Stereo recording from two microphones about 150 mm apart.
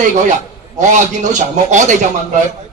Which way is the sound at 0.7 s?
55° right (ahead or behind).